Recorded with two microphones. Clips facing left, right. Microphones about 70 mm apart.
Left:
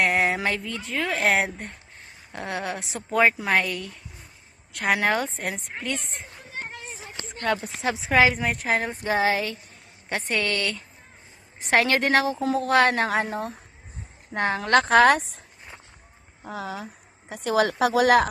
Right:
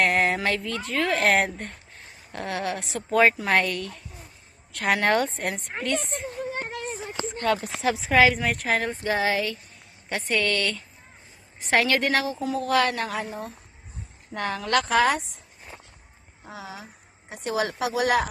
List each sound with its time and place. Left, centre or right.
0.0 s a sound: centre
0.3 s a woman's voice: centre
6.5 s a sound: right
7.8 s a woman's voice: centre
9.0 s a woman's voice: left
14.3 s speech: left
14.8 s speech: left
16.4 s speech: left